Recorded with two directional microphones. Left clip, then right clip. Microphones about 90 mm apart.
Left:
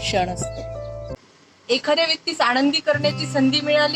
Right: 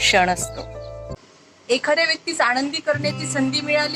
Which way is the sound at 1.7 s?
45° left (ahead or behind).